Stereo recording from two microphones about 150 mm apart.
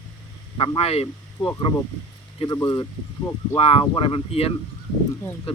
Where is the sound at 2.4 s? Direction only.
20° left (ahead or behind).